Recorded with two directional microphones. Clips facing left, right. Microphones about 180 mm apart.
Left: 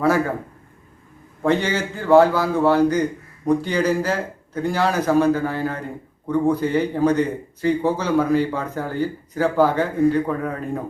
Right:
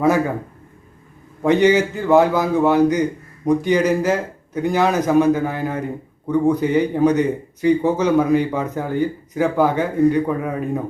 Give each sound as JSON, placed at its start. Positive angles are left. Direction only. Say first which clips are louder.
{"t": 1.5, "sound": "speech", "louder": "right 6 dB", "side_deg": -15}